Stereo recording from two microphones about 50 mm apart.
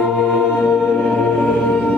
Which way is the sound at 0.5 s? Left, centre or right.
Left.